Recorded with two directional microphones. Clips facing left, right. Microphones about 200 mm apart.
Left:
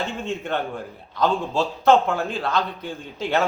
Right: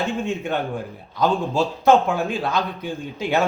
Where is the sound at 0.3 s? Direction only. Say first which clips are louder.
Right 2 dB; 15° right (ahead or behind).